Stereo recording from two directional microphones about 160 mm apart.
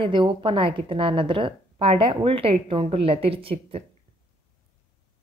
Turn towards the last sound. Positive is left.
turn(degrees=-35)  # may be behind; listen again after turning